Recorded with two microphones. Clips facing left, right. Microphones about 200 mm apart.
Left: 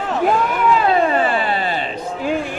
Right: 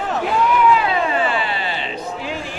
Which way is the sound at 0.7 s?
45° left (ahead or behind).